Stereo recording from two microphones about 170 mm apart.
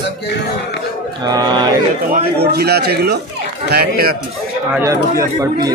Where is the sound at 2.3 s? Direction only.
70° right (ahead or behind).